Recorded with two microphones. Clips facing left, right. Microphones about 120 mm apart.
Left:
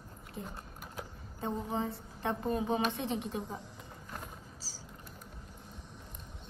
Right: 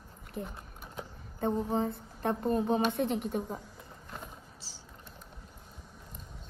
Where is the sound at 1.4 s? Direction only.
45° right (ahead or behind).